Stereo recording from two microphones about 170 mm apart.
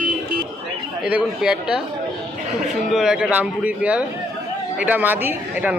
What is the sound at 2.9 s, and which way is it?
Speech, 5° right (ahead or behind).